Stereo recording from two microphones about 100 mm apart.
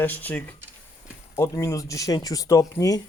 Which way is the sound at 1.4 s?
30° left (ahead or behind).